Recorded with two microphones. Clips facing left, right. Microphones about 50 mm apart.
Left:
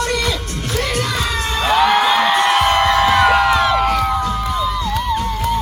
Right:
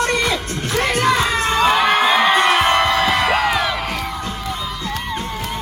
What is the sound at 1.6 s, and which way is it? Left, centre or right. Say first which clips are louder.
Music: left 3 dB; centre.